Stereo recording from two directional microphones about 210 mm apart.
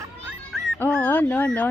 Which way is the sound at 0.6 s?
5° left (ahead or behind).